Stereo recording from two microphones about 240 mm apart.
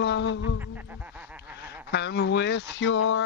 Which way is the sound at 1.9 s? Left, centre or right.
Left.